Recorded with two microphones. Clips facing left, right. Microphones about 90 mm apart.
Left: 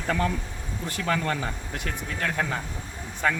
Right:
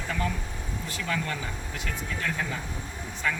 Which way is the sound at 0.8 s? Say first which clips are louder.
Left 5 dB; 50° left (ahead or behind).